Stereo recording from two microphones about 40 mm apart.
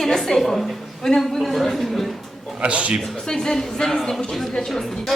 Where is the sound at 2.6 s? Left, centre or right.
Right.